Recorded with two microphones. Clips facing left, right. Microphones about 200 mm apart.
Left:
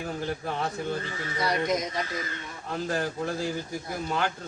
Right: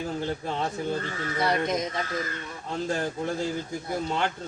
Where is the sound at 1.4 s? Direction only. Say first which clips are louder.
Right 2 dB; 25° right (ahead or behind).